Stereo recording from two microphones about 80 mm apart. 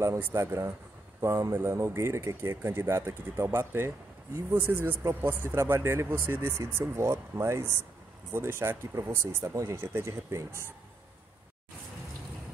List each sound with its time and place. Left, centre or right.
0.0 s speech: right
9.4 s speech: right